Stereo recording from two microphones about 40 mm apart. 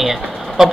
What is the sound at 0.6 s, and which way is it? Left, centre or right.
Speech, centre.